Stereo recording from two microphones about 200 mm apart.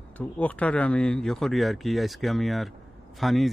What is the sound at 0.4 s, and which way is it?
Speech, 5° left (ahead or behind).